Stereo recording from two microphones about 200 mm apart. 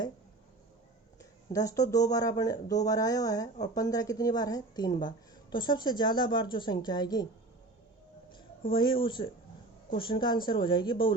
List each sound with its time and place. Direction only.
1.2 s a woman's voice: 15° left (ahead or behind)
8.7 s a woman's voice: 25° left (ahead or behind)